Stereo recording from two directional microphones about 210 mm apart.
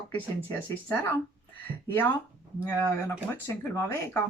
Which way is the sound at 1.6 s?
10° left (ahead or behind).